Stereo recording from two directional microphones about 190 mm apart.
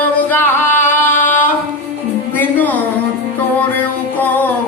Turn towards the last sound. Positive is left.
turn(degrees=10)  # may be behind; listen again after turning